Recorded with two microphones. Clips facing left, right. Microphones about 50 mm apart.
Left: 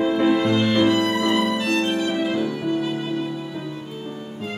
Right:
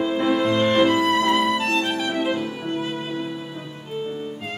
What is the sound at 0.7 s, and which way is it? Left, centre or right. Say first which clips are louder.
Music: right 1 dB; right.